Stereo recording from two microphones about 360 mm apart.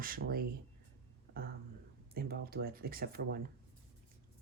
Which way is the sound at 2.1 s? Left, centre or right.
Right.